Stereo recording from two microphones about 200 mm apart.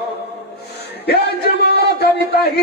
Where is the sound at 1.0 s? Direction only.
55° left (ahead or behind).